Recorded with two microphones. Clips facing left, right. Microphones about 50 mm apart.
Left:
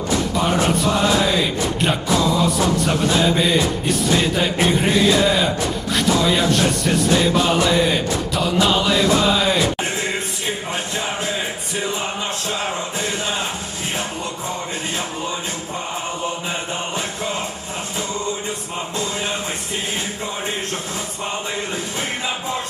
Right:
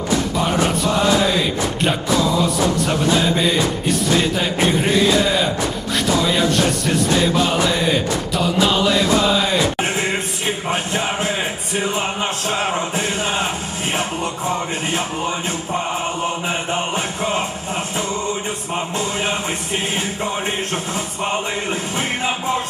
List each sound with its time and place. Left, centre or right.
0.3 s music: centre
9.8 s music: right
16.5 s mantra: right
21.2 s music: right